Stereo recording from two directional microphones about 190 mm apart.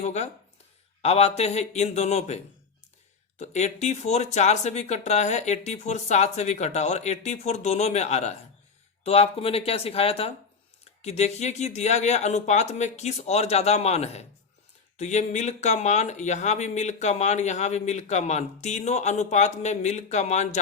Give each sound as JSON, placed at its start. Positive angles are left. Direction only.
{"t": 0.0, "sound": "speech", "side_deg": 35}